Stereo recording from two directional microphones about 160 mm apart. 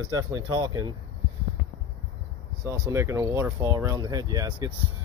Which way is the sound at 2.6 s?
20° right (ahead or behind).